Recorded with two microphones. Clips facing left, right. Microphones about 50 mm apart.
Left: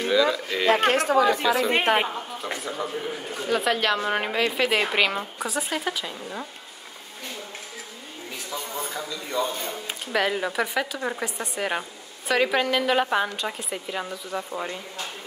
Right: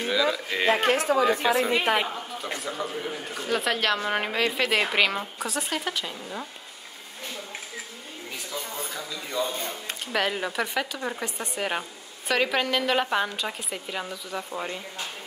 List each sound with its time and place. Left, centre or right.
0.0 s speech: centre
0.7 s speech: left
2.5 s speech: centre
8.5 s a sound: centre
9.3 s speech: centre